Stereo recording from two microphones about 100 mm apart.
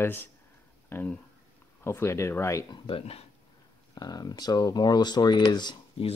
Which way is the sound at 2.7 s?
65° left (ahead or behind).